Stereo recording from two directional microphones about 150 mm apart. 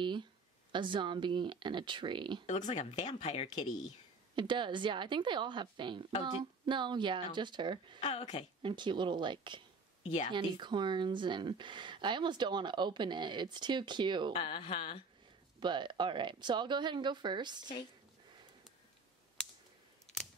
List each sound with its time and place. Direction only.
0.0 s speech: 30° right (ahead or behind)
2.4 s speech: 50° left (ahead or behind)
4.4 s speech: 30° right (ahead or behind)
8.0 s speech: 45° left (ahead or behind)
8.6 s speech: 30° right (ahead or behind)
10.0 s speech: 50° left (ahead or behind)
10.3 s speech: 30° right (ahead or behind)
14.3 s speech: 40° left (ahead or behind)
15.6 s speech: 30° right (ahead or behind)